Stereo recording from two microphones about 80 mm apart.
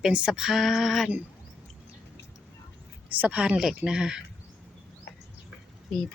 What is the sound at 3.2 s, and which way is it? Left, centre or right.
Speech, centre.